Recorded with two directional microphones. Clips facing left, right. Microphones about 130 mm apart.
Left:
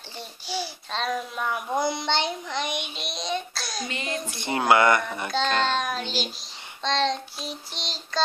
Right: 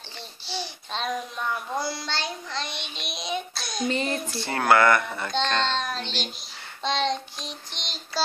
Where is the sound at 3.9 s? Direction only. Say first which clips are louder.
Right 8 dB; 35° right (ahead or behind).